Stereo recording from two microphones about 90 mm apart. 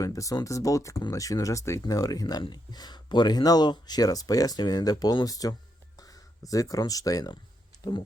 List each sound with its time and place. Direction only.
0.0 s speech: 40° left (ahead or behind)
2.2 s speech: 60° left (ahead or behind); by 5.5 s 40° left (ahead or behind)
6.0 s a sound: 45° left (ahead or behind)
6.5 s speech: 40° left (ahead or behind)